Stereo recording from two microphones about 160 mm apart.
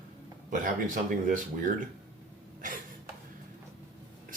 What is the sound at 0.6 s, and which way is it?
Speech, 55° right (ahead or behind).